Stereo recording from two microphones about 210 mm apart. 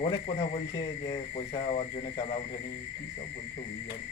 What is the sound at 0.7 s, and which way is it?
Speech, 25° left (ahead or behind).